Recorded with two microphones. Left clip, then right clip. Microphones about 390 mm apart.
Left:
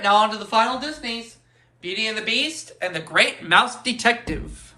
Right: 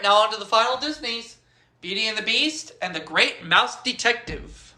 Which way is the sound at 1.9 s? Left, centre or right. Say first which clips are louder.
Even; centre.